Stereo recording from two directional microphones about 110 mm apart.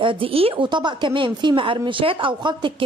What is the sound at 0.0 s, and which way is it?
A woman's voice, 50° right (ahead or behind).